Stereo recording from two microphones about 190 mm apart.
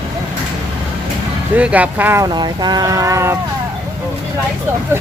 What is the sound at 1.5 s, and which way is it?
Speech, 5° right (ahead or behind).